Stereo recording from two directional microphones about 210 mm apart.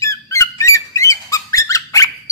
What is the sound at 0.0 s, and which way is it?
Bird, 15° left (ahead or behind).